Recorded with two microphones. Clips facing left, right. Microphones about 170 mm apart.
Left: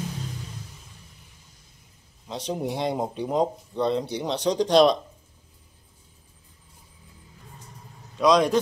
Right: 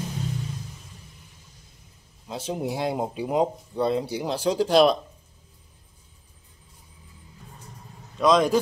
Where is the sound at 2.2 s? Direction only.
5° right (ahead or behind).